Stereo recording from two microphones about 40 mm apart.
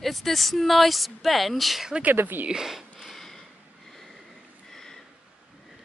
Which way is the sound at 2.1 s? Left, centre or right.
Right.